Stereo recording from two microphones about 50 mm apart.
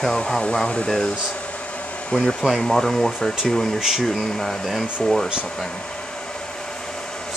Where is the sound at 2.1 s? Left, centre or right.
Left.